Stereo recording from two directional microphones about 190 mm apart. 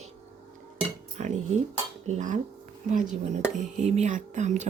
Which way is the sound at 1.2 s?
40° right (ahead or behind).